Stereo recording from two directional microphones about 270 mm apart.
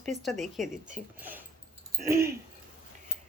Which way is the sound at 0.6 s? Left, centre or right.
Right.